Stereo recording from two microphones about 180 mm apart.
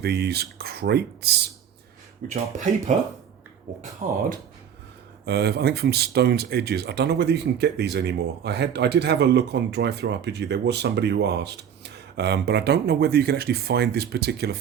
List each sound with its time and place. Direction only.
0.0 s speech: 60° right (ahead or behind)
2.2 s speech: 40° right (ahead or behind)
4.0 s speech: 45° right (ahead or behind)
5.2 s speech: 65° right (ahead or behind)